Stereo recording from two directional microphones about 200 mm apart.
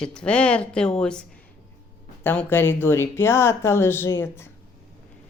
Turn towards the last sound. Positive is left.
turn(degrees=10)  # may be behind; listen again after turning